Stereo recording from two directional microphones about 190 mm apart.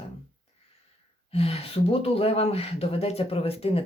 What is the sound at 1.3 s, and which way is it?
Speech, 30° left (ahead or behind).